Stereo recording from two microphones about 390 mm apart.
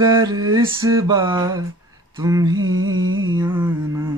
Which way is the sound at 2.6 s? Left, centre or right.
Right.